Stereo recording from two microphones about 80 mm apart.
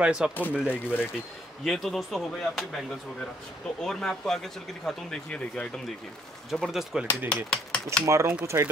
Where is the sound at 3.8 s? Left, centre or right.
Centre.